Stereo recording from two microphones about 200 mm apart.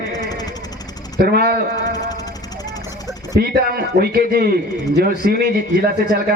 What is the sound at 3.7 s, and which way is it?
Speech, 50° right (ahead or behind).